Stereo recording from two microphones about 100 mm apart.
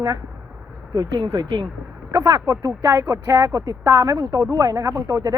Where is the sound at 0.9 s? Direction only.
40° right (ahead or behind).